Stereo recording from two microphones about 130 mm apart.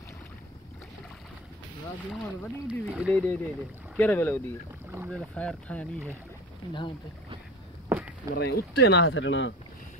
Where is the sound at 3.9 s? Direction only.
15° left (ahead or behind).